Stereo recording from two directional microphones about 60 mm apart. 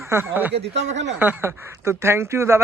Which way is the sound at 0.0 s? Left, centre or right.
Right.